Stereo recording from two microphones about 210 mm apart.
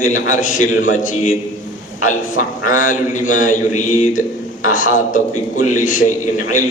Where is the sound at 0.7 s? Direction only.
70° left (ahead or behind).